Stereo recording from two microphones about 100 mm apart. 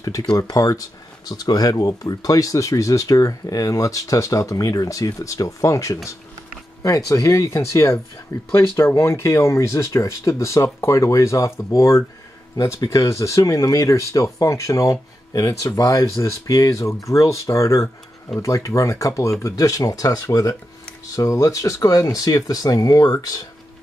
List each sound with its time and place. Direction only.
0.0 s speech: 35° left (ahead or behind)